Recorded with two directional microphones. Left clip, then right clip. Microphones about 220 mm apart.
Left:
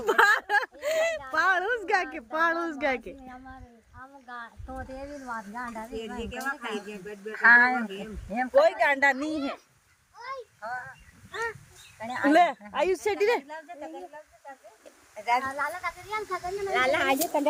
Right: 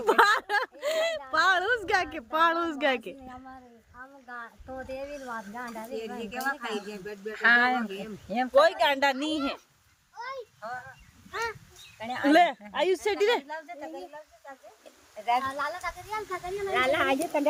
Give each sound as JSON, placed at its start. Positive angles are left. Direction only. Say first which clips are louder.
{"t": 0.0, "sound": "a sound", "louder": "even", "side_deg": 0}
{"t": 2.0, "sound": "speech", "louder": "right 2 dB", "side_deg": -5}
{"t": 6.0, "sound": "speech", "louder": "right 2 dB", "side_deg": -35}
{"t": 8.6, "sound": "speech", "louder": "left 1 dB", "side_deg": -10}
{"t": 10.2, "sound": "a sound", "louder": "right 1 dB", "side_deg": -45}
{"t": 11.3, "sound": "speech", "louder": "even", "side_deg": -10}
{"t": 11.9, "sound": "speech", "louder": "left 1 dB", "side_deg": -30}
{"t": 12.3, "sound": "speech", "louder": "even", "side_deg": 0}
{"t": 13.5, "sound": "speech", "louder": "right 1 dB", "side_deg": -45}
{"t": 15.1, "sound": "speech", "louder": "left 1 dB", "side_deg": 20}
{"t": 15.4, "sound": "speech", "louder": "left 1 dB", "side_deg": 5}